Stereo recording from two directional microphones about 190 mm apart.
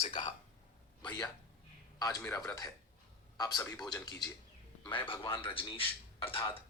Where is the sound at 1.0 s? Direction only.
20° left (ahead or behind).